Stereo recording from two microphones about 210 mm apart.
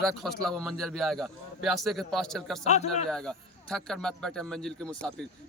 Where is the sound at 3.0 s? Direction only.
5° left (ahead or behind).